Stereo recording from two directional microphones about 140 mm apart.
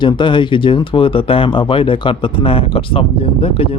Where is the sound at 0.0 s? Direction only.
35° left (ahead or behind).